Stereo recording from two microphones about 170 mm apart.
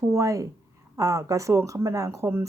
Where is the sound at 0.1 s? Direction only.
20° right (ahead or behind).